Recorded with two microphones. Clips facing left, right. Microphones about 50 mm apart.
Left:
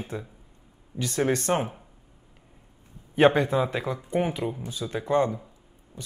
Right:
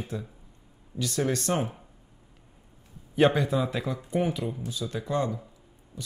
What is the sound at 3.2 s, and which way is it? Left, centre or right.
Speech, left.